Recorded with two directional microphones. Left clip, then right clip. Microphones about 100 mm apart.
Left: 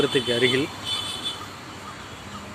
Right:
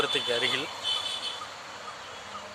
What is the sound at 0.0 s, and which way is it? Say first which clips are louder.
Speech: left 5 dB; centre (ahead or behind).